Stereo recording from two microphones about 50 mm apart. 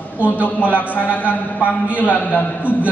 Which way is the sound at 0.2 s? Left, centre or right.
Left.